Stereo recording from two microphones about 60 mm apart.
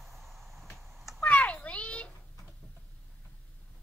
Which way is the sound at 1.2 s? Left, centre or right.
Left.